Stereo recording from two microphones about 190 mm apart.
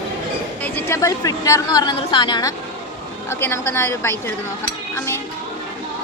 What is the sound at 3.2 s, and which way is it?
Speech, 15° left (ahead or behind).